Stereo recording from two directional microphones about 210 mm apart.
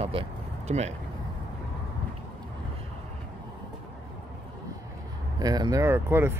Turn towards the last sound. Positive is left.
turn(degrees=-10)  # may be behind; listen again after turning